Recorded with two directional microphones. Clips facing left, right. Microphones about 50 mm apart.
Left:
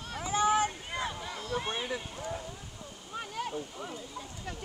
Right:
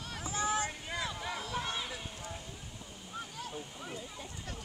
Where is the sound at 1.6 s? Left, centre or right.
Left.